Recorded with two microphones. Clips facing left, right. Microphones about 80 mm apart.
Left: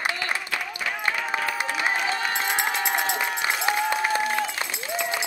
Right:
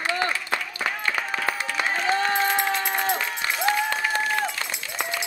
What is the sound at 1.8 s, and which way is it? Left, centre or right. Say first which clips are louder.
Crowd: right 4 dB; centre.